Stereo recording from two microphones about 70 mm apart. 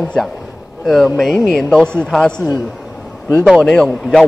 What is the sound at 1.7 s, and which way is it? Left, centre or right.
A man's voice, centre.